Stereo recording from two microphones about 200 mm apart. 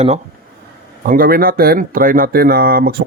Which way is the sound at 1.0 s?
45° right (ahead or behind).